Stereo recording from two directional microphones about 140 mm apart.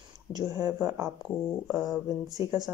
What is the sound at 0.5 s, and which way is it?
Speech, 25° right (ahead or behind).